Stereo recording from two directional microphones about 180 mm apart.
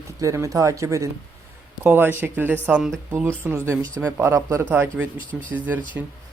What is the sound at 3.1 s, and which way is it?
Speech, 15° right (ahead or behind).